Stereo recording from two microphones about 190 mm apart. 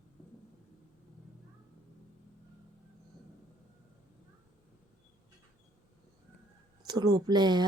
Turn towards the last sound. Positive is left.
turn(degrees=-20)  # may be behind; listen again after turning